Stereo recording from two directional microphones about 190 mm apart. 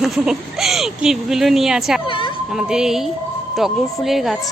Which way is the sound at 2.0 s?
25° left (ahead or behind).